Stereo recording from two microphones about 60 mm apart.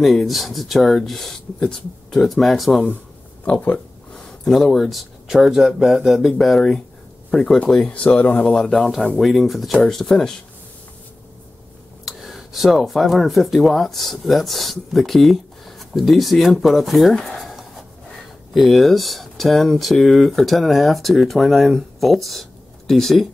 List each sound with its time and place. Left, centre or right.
0.0 s speech: centre
4.1 s speech: centre
6.3 s speech: centre
7.2 s speech: centre
8.5 s speech: centre
12.0 s speech: centre
17.2 s writing: centre
18.5 s speech: centre